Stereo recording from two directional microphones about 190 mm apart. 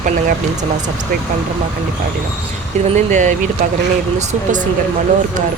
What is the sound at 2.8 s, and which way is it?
Speech, 40° right (ahead or behind).